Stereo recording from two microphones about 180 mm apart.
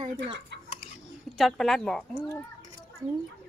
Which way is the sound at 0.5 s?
70° right (ahead or behind).